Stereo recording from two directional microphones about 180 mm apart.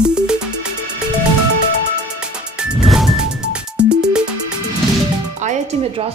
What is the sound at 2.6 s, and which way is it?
Music, 5° right (ahead or behind).